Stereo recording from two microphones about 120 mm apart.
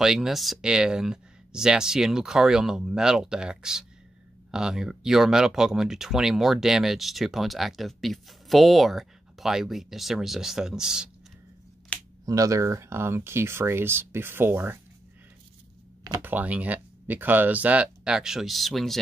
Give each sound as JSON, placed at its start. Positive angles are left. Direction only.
{"t": 0.0, "sound": "speech", "side_deg": -5}
{"t": 11.9, "sound": "camera", "side_deg": 10}
{"t": 12.3, "sound": "speech", "side_deg": -30}
{"t": 16.2, "sound": "speech", "side_deg": -15}